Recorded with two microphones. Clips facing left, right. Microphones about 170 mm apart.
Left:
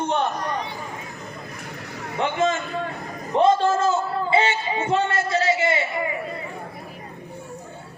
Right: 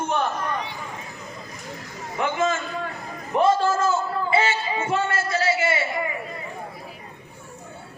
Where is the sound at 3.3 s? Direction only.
25° left (ahead or behind).